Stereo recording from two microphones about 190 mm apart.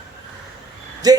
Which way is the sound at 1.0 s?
20° right (ahead or behind).